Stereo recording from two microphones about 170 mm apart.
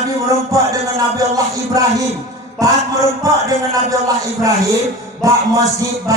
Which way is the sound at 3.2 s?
20° right (ahead or behind).